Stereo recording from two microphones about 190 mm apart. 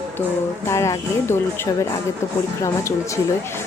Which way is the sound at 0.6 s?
15° left (ahead or behind).